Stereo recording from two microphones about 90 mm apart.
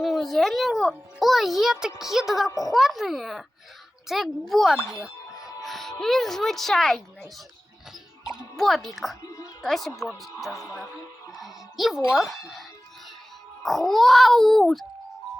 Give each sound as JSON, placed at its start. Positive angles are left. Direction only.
{"t": 0.0, "sound": "a child's voice", "side_deg": 0}
{"t": 2.5, "sound": "speech", "side_deg": 40}
{"t": 2.7, "sound": "speech", "side_deg": 0}
{"t": 8.5, "sound": "speech", "side_deg": 5}
{"t": 9.2, "sound": "music", "side_deg": 40}
{"t": 9.6, "sound": "speech", "side_deg": 0}
{"t": 10.5, "sound": "speech", "side_deg": 35}
{"t": 11.3, "sound": "speech", "side_deg": 0}
{"t": 13.6, "sound": "speech", "side_deg": 0}